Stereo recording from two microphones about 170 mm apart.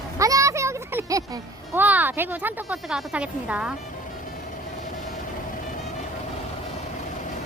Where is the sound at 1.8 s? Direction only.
10° right (ahead or behind).